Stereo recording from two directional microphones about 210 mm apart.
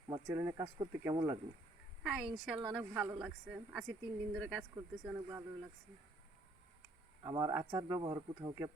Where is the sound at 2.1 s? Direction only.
5° right (ahead or behind).